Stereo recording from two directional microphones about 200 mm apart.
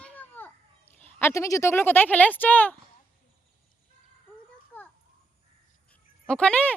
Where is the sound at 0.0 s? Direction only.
10° left (ahead or behind).